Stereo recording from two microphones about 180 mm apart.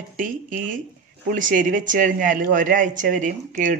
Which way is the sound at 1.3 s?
50° right (ahead or behind).